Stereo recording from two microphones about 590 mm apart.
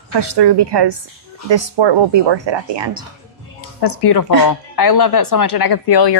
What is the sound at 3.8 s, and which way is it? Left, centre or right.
Speech, left.